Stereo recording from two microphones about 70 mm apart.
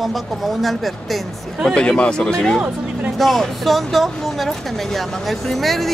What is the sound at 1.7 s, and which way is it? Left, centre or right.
Speech, centre.